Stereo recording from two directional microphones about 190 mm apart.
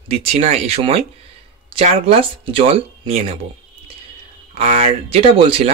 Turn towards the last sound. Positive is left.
turn(degrees=-30)  # may be behind; listen again after turning